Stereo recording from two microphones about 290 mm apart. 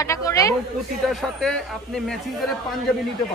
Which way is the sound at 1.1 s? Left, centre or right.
Centre.